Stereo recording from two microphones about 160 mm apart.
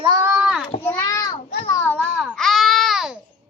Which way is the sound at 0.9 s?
15° left (ahead or behind).